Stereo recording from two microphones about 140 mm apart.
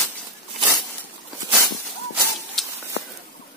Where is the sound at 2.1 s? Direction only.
Centre (ahead or behind).